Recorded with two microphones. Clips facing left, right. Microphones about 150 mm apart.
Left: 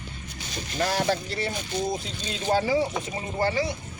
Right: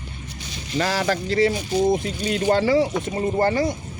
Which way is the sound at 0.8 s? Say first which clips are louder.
Right 3 dB; 90° right.